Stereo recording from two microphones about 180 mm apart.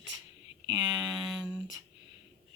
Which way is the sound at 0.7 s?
20° right (ahead or behind).